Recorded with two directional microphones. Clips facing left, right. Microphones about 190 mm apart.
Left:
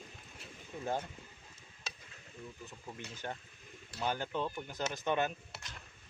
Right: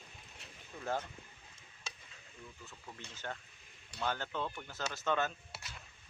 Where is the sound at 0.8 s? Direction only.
15° left (ahead or behind).